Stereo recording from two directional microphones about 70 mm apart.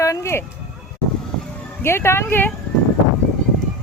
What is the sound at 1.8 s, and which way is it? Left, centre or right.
Speech, left.